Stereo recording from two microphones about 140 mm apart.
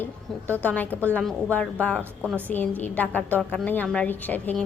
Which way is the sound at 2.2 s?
10° right (ahead or behind).